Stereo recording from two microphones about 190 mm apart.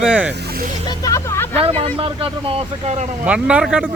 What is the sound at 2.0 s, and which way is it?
Speech, 30° right (ahead or behind).